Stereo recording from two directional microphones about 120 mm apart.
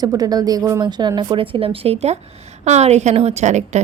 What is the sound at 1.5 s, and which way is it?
A woman's voice, 50° right (ahead or behind).